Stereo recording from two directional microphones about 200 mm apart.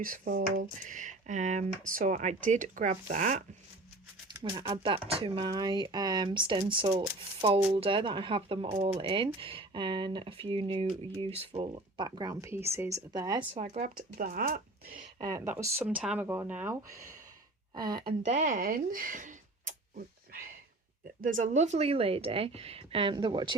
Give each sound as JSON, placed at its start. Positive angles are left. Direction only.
{"t": 0.0, "sound": "speech", "side_deg": -45}
{"t": 4.3, "sound": "speech", "side_deg": -20}
{"t": 13.5, "sound": "speech", "side_deg": -35}
{"t": 15.2, "sound": "speech", "side_deg": -15}
{"t": 18.2, "sound": "speech", "side_deg": -35}
{"t": 21.2, "sound": "speech", "side_deg": -40}